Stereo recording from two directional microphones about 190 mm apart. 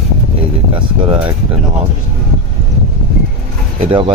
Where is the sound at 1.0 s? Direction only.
25° right (ahead or behind).